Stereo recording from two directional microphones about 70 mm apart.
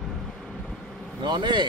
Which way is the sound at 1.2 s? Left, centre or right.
Right.